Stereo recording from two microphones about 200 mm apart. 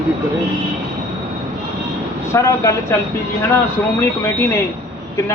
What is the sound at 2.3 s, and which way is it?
Speech, 15° left (ahead or behind).